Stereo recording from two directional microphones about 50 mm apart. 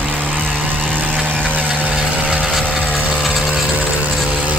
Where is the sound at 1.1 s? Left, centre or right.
Left.